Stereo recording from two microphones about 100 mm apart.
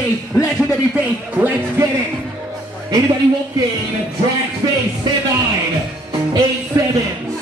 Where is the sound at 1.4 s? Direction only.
15° right (ahead or behind).